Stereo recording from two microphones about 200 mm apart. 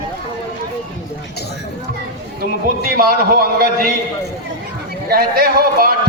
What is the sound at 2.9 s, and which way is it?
Speech, 50° right (ahead or behind).